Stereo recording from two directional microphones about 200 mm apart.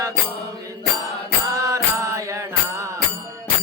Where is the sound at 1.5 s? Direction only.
15° right (ahead or behind).